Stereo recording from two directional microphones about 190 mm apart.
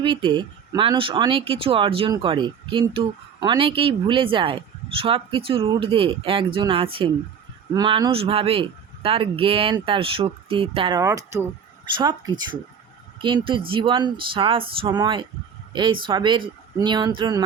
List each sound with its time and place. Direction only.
0.0 s speech: 25° right (ahead or behind)